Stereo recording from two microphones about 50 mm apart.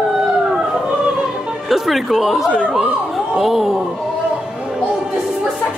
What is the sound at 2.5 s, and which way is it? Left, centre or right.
Speech, centre.